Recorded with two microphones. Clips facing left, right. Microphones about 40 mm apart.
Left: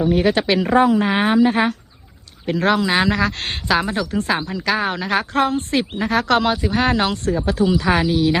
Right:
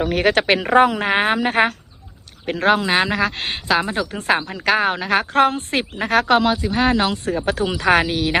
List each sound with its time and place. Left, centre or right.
0.0 s speech: right
0.3 s speech: right
2.5 s speech: right
3.3 s speech: centre
3.7 s speech: centre
4.1 s speech: right
6.3 s speech: centre
7.4 s speech: right